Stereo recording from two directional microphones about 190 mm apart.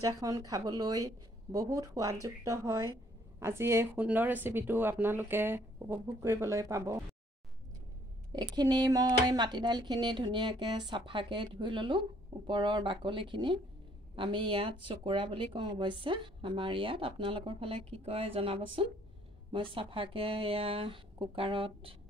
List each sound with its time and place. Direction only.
0.0 s speech: 20° right (ahead or behind)
8.3 s speech: 20° right (ahead or behind)